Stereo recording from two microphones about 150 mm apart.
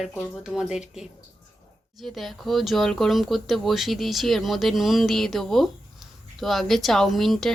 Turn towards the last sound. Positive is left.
turn(degrees=0)  # may be behind; listen again after turning